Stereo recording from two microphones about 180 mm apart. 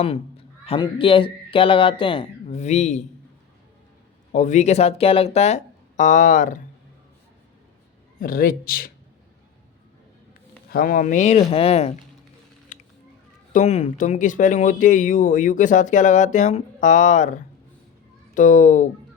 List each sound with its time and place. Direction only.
0.6 s speech: 30° left (ahead or behind)
4.3 s speech: 45° left (ahead or behind)
8.2 s speech: 50° left (ahead or behind)
10.7 s speech: 50° left (ahead or behind); by 11.9 s 35° left (ahead or behind)
13.5 s speech: 40° left (ahead or behind)